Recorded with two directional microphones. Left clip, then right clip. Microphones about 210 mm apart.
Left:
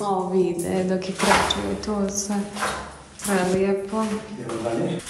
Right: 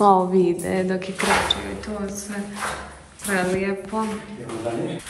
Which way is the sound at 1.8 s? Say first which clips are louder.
Left 4 dB; 30° left (ahead or behind).